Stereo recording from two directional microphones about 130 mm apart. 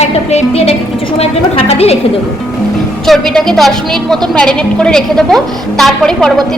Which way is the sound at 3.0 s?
Centre (ahead or behind).